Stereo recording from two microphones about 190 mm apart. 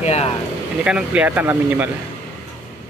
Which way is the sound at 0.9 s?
5° right (ahead or behind).